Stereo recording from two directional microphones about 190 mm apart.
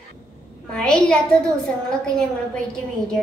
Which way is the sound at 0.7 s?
5° left (ahead or behind).